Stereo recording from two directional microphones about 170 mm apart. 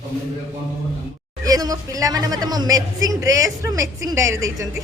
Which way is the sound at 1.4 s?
20° right (ahead or behind).